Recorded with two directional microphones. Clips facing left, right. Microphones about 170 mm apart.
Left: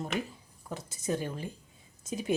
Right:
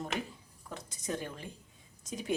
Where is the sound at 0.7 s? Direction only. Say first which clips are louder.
Left 5 dB; 5° left (ahead or behind).